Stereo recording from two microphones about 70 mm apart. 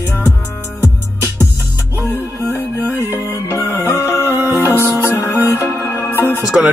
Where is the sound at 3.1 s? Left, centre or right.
Left.